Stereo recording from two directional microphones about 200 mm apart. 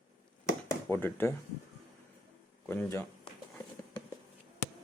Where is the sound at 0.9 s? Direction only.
10° left (ahead or behind).